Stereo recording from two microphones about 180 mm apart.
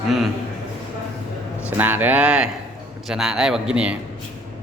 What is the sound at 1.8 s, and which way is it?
Speech, 10° right (ahead or behind).